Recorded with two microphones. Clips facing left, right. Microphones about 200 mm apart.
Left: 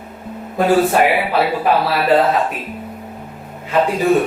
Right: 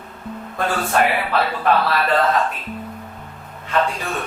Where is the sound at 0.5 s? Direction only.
20° left (ahead or behind).